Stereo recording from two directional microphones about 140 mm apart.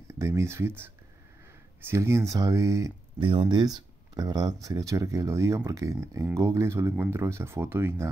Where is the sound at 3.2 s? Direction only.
40° right (ahead or behind).